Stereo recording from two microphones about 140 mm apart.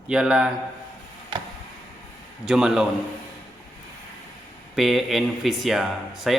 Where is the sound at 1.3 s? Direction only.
35° right (ahead or behind).